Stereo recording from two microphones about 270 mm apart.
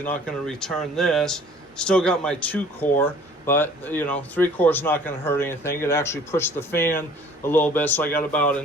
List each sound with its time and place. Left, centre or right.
0.0 s speech: centre